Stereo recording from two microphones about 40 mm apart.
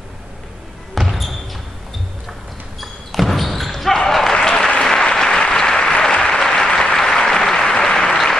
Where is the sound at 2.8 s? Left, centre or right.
Centre.